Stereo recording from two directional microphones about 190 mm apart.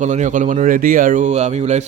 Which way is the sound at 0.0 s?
40° right (ahead or behind).